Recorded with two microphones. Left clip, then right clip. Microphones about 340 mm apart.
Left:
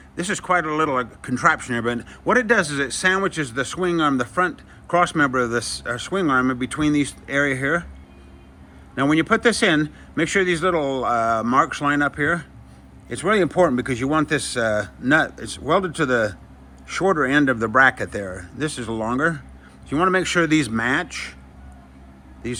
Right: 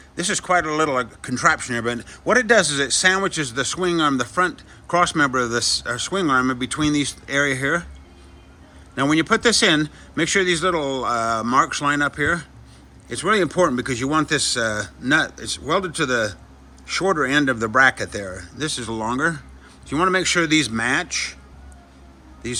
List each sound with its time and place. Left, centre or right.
0.2 s speech: centre
9.0 s speech: centre
22.4 s speech: centre